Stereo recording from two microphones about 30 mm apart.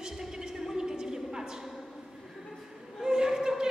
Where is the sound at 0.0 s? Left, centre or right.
Centre.